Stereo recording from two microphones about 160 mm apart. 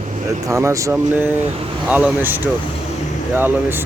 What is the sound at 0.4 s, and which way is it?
Speech, 20° right (ahead or behind).